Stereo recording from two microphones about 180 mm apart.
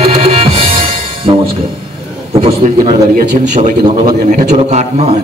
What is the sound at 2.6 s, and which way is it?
A man's voice, 45° right (ahead or behind).